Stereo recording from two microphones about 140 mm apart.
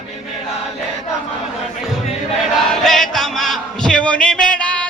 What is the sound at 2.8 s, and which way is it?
Music, centre (ahead or behind).